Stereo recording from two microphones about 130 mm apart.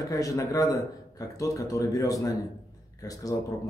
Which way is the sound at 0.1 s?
25° left (ahead or behind).